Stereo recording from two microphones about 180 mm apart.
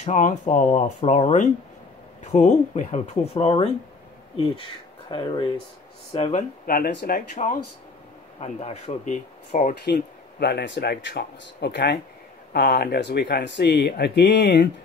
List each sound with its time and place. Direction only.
0.0 s speech: 40° left (ahead or behind)
5.1 s speech: 25° left (ahead or behind)
6.6 s speech: 55° left (ahead or behind)
8.4 s speech: 35° left (ahead or behind)
10.4 s speech: 70° left (ahead or behind)